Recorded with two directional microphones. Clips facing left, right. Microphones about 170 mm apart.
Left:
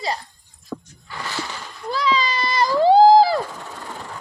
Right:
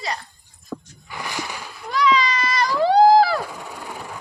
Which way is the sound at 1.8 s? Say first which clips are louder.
Right 2 dB; 30° left (ahead or behind).